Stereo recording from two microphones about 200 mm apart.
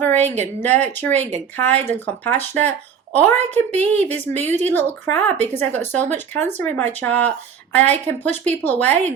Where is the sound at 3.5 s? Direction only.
10° left (ahead or behind).